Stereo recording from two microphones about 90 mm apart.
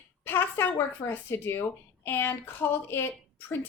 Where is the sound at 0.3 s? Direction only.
25° left (ahead or behind).